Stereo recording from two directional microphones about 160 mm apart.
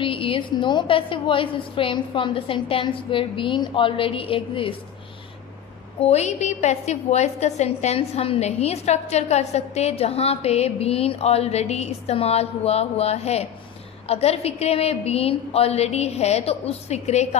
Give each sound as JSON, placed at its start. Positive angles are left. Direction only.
{"t": 0.0, "sound": "a woman's voice", "side_deg": 35}
{"t": 6.0, "sound": "a woman's voice", "side_deg": 45}